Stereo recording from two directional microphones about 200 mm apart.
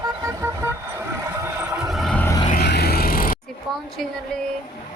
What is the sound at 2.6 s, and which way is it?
Vehicle, 55° left (ahead or behind).